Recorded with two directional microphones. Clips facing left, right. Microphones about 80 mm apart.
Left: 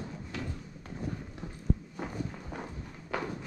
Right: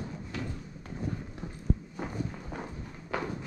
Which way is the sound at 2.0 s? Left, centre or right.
Right.